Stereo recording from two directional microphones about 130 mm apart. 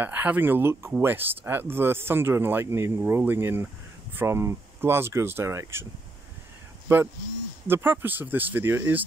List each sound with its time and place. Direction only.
0.0 s speech: 15° right (ahead or behind)
7.6 s speech: 15° right (ahead or behind)